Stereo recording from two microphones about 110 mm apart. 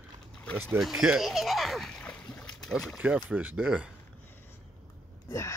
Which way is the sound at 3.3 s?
15° right (ahead or behind).